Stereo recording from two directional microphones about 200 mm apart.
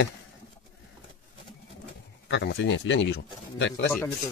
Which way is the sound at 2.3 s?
60° left (ahead or behind).